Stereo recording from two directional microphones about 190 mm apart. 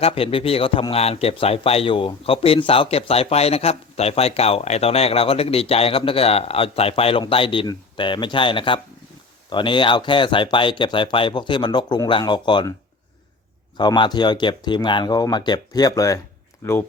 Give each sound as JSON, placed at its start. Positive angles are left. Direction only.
{"t": 0.0, "sound": "a man's voice", "side_deg": 30}
{"t": 13.7, "sound": "speech", "side_deg": 25}